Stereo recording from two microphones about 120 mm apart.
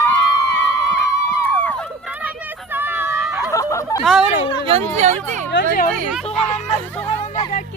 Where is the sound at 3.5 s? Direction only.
25° left (ahead or behind).